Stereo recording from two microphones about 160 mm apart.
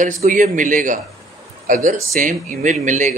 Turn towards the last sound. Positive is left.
turn(degrees=-50)  # may be behind; listen again after turning